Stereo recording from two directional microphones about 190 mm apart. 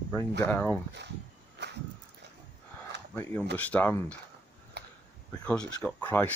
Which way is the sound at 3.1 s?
10° left (ahead or behind).